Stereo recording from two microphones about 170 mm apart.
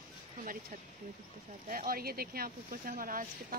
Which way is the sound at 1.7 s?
55° right (ahead or behind).